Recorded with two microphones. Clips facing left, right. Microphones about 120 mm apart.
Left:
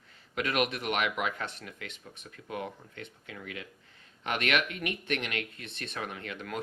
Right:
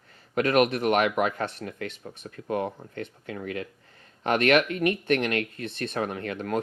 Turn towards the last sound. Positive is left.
turn(degrees=-45)  # may be behind; listen again after turning